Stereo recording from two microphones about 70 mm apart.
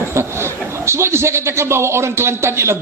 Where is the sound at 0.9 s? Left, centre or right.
Right.